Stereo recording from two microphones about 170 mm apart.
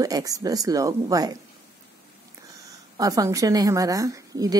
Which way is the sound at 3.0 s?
20° right (ahead or behind).